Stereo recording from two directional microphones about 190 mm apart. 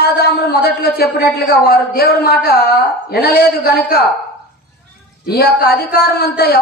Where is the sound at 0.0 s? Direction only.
55° left (ahead or behind).